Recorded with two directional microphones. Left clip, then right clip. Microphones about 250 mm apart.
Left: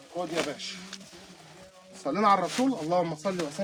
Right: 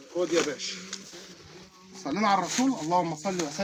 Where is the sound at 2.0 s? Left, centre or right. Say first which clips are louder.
Left 2 dB; centre.